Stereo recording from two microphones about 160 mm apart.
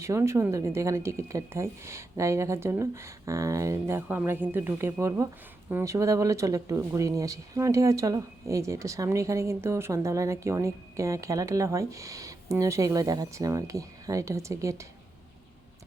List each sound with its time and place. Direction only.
0.0 s speech: 15° right (ahead or behind)